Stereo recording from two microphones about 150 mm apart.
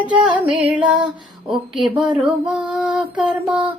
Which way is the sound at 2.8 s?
10° right (ahead or behind).